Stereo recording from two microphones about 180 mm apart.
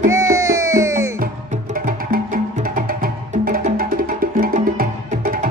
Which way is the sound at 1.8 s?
50° right (ahead or behind).